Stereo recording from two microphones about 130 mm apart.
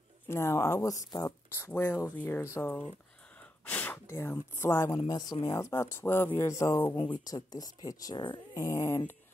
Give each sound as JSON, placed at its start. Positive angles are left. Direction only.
{"t": 0.3, "sound": "speech", "side_deg": 20}
{"t": 4.9, "sound": "speech", "side_deg": 30}